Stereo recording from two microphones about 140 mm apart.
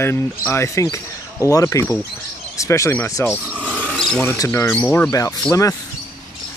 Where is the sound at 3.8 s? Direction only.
5° left (ahead or behind).